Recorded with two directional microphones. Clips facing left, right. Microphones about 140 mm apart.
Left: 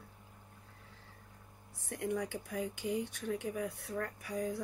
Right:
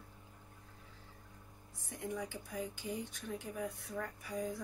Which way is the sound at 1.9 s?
65° left (ahead or behind).